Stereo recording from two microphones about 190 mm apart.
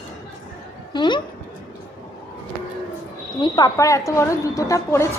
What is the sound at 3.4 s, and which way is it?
A woman's voice, 20° left (ahead or behind).